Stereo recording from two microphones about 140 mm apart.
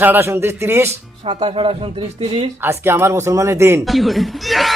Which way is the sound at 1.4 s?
45° right (ahead or behind).